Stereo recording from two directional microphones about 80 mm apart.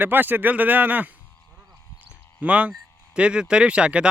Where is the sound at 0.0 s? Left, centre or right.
Right.